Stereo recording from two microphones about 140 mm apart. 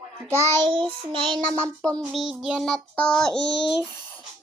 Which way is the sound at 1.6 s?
10° left (ahead or behind).